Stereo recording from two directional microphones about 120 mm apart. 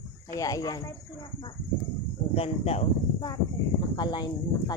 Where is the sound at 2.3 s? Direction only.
55° left (ahead or behind).